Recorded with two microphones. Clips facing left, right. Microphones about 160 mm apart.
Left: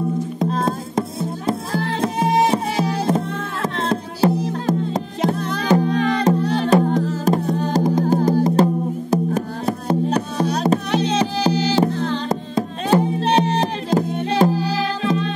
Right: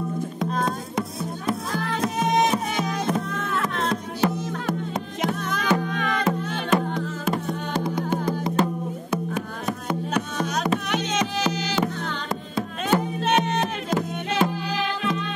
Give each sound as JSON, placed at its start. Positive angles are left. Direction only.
{"t": 0.4, "sound": "music", "side_deg": 30}